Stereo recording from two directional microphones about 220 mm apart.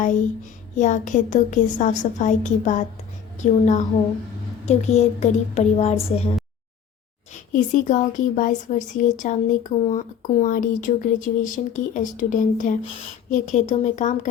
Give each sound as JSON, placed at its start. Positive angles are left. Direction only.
{"t": 0.8, "sound": "speech", "side_deg": 35}
{"t": 7.5, "sound": "speech", "side_deg": 35}